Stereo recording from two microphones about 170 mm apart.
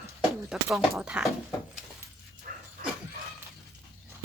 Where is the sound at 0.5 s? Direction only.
Centre (ahead or behind).